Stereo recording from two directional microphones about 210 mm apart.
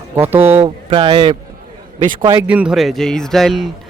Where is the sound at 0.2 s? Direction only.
10° right (ahead or behind).